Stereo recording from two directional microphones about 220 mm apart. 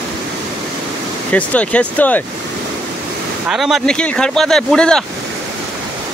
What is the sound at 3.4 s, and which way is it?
Speech, centre (ahead or behind).